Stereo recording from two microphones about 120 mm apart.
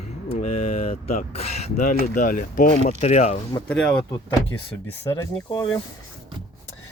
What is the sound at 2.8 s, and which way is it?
Speech, 65° left (ahead or behind).